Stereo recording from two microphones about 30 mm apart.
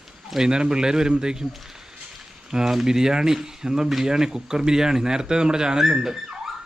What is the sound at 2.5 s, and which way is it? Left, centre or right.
Speech, centre.